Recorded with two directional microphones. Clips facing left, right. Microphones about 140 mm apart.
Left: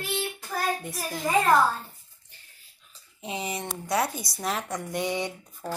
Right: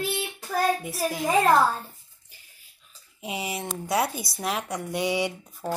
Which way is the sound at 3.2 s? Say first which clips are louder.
Right 1 dB; 10° right (ahead or behind).